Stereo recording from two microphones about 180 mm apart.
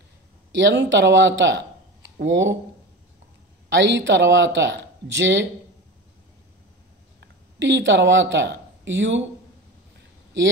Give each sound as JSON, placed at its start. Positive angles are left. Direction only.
{"t": 0.6, "sound": "speech", "side_deg": -85}
{"t": 3.7, "sound": "speech", "side_deg": -80}
{"t": 7.2, "sound": "speech", "side_deg": -90}